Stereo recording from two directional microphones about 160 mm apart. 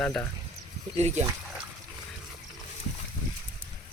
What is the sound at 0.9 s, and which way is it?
Speech, 45° right (ahead or behind).